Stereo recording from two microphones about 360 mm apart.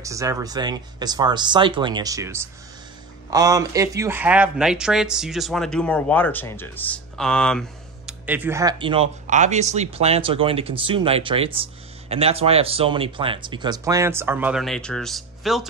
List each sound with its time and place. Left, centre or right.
0.0 s speech: centre